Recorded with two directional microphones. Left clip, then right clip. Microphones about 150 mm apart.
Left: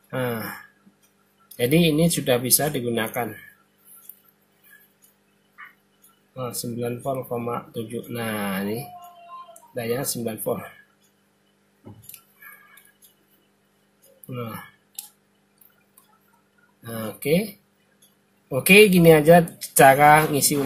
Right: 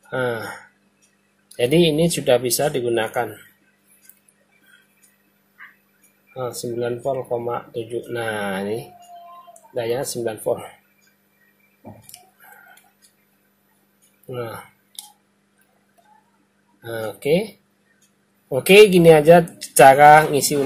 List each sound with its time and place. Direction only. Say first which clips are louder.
0.1 s speech: right 4 dB; 15° right (ahead or behind)
1.6 s speech: right 3 dB; 15° right (ahead or behind)
6.3 s speech: right 5 dB; 15° right (ahead or behind)
9.8 s speech: right 4 dB; 15° right (ahead or behind)
16.8 s speech: right 5 dB; 15° right (ahead or behind)
18.5 s speech: right 4 dB; 15° right (ahead or behind)